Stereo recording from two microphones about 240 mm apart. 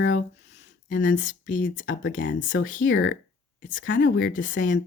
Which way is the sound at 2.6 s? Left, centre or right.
Left.